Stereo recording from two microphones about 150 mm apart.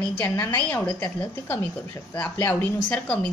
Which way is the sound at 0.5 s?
10° left (ahead or behind).